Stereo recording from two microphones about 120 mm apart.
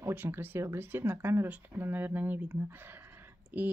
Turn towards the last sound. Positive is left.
turn(degrees=-15)  # may be behind; listen again after turning